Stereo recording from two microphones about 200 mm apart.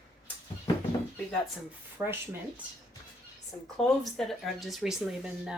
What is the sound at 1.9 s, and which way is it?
Speech, 10° right (ahead or behind).